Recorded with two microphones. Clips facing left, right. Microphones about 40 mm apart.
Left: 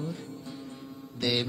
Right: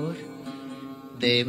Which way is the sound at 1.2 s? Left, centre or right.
Right.